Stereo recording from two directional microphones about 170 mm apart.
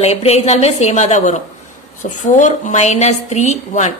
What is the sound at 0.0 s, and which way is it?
A woman's voice, 40° left (ahead or behind).